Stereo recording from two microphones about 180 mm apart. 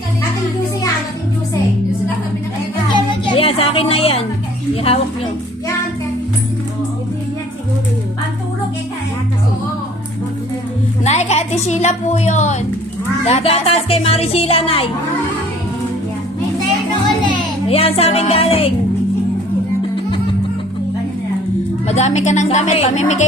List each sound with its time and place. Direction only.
2.9 s music: 30° left (ahead or behind)
4.7 s speech: 30° left (ahead or behind)
11.0 s a woman's voice: 40° left (ahead or behind)
17.2 s a child's voice: 30° left (ahead or behind)
21.8 s speech: 40° left (ahead or behind)